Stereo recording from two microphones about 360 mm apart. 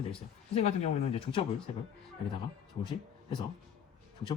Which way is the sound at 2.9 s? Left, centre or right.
Centre.